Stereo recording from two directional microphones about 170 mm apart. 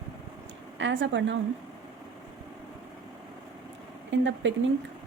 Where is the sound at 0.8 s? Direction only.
90° right.